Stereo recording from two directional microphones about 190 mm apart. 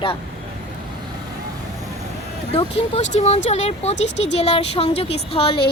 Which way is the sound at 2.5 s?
35° left (ahead or behind).